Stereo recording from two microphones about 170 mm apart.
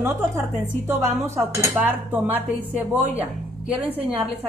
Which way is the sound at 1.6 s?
10° right (ahead or behind).